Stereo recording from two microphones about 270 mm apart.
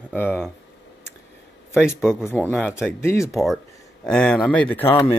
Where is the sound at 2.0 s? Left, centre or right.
Centre.